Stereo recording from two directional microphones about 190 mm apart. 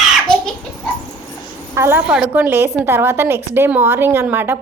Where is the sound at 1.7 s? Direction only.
10° right (ahead or behind).